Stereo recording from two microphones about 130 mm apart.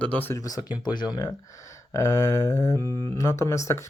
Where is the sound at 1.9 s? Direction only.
25° left (ahead or behind).